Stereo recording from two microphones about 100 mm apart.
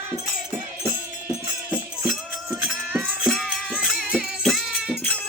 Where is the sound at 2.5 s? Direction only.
5° right (ahead or behind).